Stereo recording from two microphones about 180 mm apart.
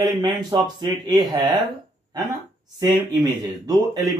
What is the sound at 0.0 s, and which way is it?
Speech, 20° right (ahead or behind).